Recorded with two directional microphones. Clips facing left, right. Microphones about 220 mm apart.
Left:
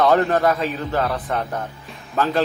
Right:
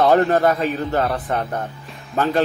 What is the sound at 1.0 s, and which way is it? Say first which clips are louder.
Speech: even; 25° right (ahead or behind).